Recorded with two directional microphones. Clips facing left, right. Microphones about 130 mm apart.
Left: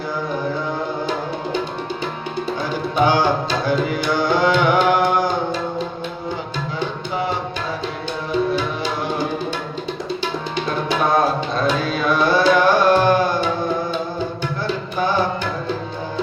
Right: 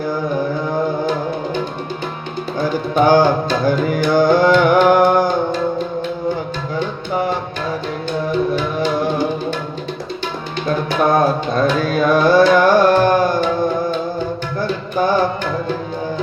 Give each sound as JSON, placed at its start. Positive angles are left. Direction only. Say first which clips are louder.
{"t": 2.9, "sound": "tabla", "louder": "right 5 dB", "side_deg": -45}
{"t": 3.7, "sound": "music", "louder": "right 4 dB", "side_deg": -45}
{"t": 8.5, "sound": "music", "louder": "right 4 dB", "side_deg": -50}
{"t": 10.8, "sound": "carnatic music", "louder": "right 3 dB", "side_deg": -50}
{"t": 14.9, "sound": "tabla", "louder": "right 5 dB", "side_deg": -45}